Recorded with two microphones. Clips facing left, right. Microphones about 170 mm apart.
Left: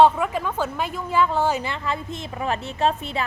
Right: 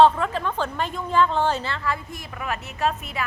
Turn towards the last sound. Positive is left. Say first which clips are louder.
# left 3 dB
turn(degrees=30)  # may be behind; listen again after turning